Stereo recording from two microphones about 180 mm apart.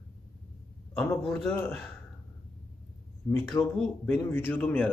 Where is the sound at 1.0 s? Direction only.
10° left (ahead or behind).